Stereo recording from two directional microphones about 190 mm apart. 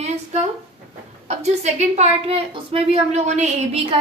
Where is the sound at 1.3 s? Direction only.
35° right (ahead or behind).